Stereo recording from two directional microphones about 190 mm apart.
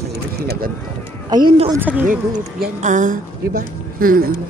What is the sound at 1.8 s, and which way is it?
Speech, 10° right (ahead or behind).